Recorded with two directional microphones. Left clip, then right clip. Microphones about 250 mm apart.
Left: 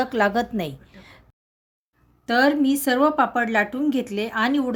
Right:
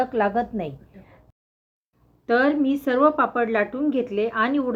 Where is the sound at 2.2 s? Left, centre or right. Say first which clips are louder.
Left 1 dB; left.